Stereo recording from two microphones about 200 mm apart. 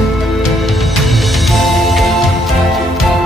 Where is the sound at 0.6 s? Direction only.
Centre (ahead or behind).